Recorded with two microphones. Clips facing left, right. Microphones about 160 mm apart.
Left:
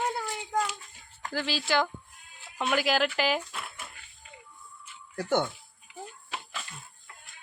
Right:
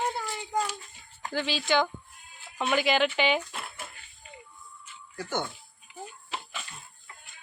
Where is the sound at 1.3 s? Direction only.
Centre (ahead or behind).